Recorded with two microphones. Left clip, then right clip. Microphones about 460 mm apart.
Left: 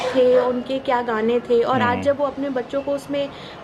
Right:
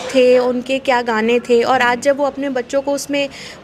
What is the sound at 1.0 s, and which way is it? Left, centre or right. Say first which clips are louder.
Speech: right 5 dB; right.